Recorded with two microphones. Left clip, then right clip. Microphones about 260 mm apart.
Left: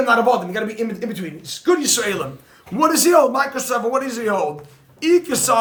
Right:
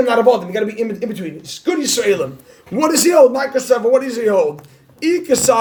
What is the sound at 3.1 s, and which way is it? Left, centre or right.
Speech, centre.